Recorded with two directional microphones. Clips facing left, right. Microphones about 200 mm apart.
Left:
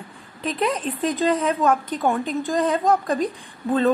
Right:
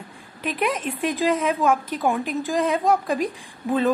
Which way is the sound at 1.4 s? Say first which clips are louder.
Left 1 dB; 5° right (ahead or behind).